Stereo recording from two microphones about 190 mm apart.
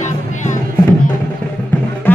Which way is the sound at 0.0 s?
40° left (ahead or behind).